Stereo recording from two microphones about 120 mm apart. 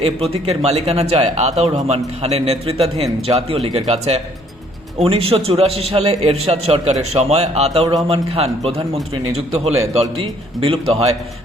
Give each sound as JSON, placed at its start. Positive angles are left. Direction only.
{"t": 0.0, "sound": "speech", "side_deg": -55}